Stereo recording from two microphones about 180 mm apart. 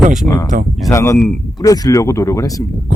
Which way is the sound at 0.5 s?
50° right (ahead or behind).